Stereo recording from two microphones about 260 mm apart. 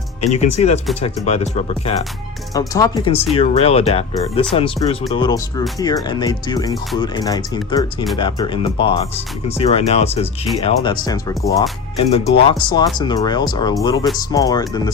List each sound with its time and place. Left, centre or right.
0.3 s speech: left
11.9 s speech: left